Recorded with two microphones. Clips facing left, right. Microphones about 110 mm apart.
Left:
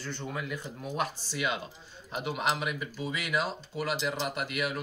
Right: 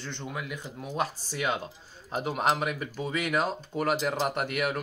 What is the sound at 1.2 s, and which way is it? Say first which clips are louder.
Speech: right 2 dB; 45° right (ahead or behind).